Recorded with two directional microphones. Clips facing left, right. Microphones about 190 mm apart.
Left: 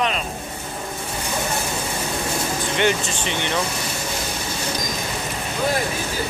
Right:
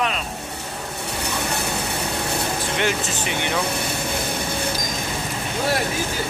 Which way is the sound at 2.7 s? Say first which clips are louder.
Left 4 dB; 5° right (ahead or behind).